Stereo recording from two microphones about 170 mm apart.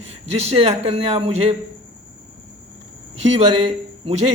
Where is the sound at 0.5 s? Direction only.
35° right (ahead or behind).